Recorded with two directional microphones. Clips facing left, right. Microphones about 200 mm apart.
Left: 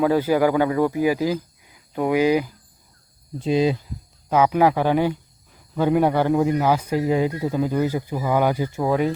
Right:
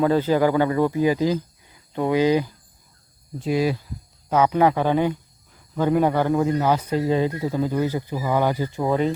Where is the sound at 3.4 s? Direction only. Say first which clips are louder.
Left 2 dB; 20° left (ahead or behind).